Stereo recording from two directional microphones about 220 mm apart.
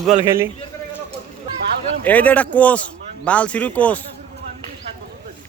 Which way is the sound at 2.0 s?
5° left (ahead or behind).